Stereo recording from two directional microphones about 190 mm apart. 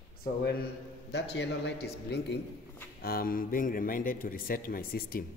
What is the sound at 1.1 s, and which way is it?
A man's voice, 65° left (ahead or behind).